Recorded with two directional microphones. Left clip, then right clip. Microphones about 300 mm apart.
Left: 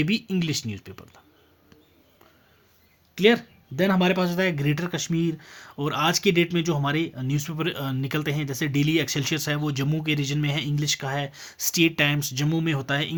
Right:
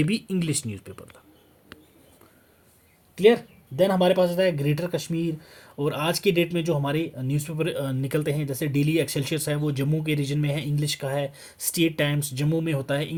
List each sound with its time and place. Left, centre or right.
0.0 s speech: centre
3.2 s speech: left